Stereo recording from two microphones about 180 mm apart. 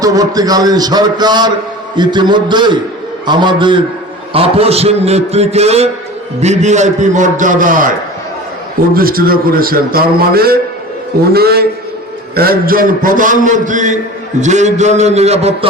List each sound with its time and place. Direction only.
0.0 s a man's voice: 20° right (ahead or behind); by 7.9 s 45° right (ahead or behind)
9.0 s a man's voice: 55° right (ahead or behind); by 15.5 s 35° right (ahead or behind)